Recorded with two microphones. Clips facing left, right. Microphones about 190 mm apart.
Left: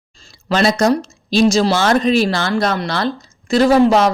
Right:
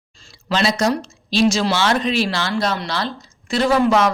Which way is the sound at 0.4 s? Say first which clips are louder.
Left 4 dB; 50° left (ahead or behind).